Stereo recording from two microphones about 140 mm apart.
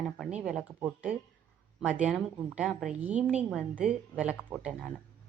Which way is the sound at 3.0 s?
10° right (ahead or behind).